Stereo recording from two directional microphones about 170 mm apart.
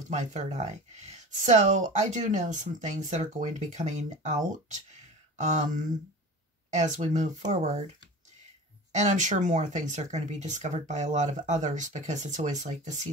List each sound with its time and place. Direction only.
0.1 s speech: 45° right (ahead or behind)
8.9 s speech: 45° right (ahead or behind)